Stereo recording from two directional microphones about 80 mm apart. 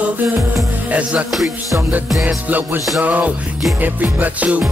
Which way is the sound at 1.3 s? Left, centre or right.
Centre.